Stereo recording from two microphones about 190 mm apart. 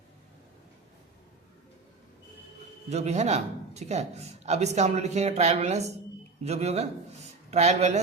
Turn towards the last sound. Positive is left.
turn(degrees=-35)  # may be behind; listen again after turning